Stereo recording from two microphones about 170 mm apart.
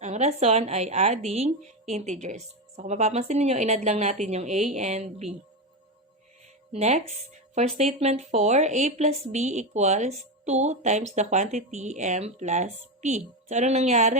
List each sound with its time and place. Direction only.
0.0 s a woman's voice: 40° right (ahead or behind)
6.7 s speech: 40° right (ahead or behind)